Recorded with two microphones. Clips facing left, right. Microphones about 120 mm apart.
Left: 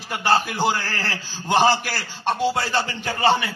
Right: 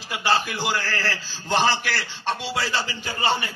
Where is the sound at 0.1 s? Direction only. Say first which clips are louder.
Left 3 dB; 50° left (ahead or behind).